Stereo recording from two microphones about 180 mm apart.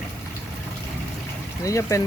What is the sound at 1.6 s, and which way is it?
Speech, 15° left (ahead or behind).